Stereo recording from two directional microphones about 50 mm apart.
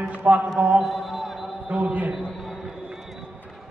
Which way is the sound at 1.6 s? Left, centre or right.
Right.